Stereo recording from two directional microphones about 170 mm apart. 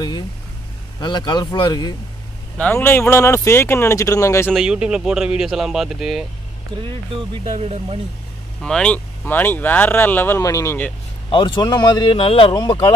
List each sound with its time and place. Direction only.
1.0 s speech: 25° left (ahead or behind)
2.6 s speech: 10° left (ahead or behind)
4.5 s speech: 5° right (ahead or behind)
6.8 s speech: 30° right (ahead or behind)
8.5 s speech: 5° left (ahead or behind)
11.2 s speech: 30° left (ahead or behind)